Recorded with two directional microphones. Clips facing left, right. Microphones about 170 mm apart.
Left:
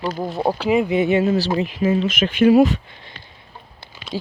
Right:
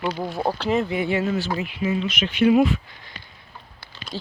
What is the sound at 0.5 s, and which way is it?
Speech, 10° left (ahead or behind).